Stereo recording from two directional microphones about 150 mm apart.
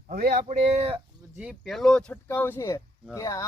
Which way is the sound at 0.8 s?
40° right (ahead or behind).